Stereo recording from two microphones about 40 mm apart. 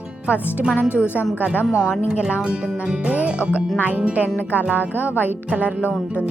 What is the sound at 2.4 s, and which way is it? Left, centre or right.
Music, right.